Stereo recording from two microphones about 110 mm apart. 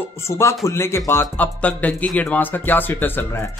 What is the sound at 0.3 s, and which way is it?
Speech, 25° left (ahead or behind).